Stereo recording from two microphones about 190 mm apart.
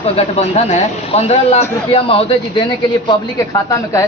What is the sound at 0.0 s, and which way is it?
A man's voice, 30° left (ahead or behind).